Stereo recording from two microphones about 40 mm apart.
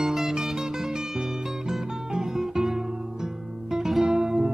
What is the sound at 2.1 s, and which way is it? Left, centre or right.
Music, centre.